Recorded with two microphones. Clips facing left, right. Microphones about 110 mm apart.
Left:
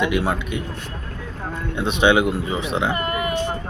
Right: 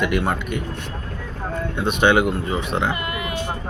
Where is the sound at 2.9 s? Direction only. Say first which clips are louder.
Left 4 dB; 45° left (ahead or behind).